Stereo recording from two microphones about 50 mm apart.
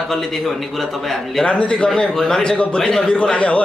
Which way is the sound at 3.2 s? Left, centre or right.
Left.